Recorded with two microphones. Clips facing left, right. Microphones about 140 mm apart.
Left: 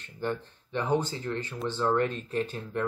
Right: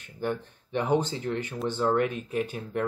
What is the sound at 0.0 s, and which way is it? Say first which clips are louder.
Speech: right 1 dB; 10° right (ahead or behind).